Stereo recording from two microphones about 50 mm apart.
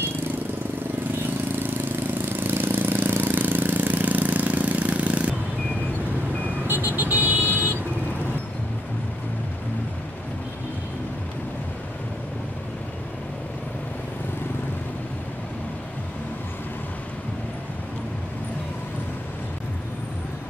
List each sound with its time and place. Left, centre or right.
2.4 s vehicle: right
6.7 s vehicle: right